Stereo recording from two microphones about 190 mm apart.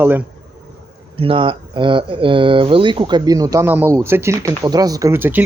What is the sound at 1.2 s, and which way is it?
Speech, 30° right (ahead or behind).